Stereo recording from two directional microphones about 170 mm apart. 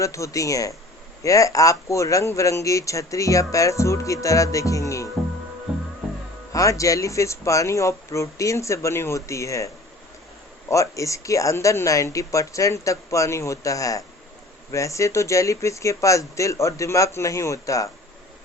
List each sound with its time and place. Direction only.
0.0 s speech: 20° left (ahead or behind)
6.5 s speech: 20° left (ahead or behind)